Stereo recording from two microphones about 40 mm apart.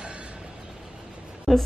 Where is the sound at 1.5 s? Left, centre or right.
Centre.